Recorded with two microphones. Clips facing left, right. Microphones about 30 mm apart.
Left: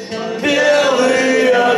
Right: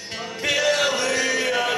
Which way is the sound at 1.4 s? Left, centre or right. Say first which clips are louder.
Left 11 dB; left.